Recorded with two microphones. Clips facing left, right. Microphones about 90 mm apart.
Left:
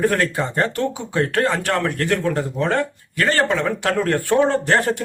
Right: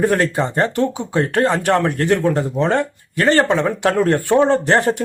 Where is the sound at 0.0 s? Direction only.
25° right (ahead or behind).